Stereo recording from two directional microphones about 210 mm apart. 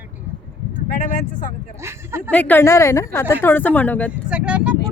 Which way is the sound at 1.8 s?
10° right (ahead or behind).